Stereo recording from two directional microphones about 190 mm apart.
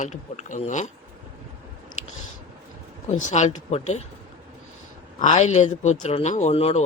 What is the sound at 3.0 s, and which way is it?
Speech, 40° left (ahead or behind).